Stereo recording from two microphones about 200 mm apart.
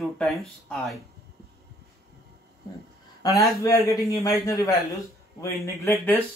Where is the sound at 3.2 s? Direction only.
15° left (ahead or behind).